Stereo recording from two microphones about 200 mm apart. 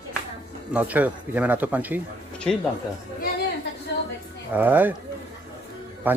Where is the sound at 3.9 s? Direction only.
55° left (ahead or behind).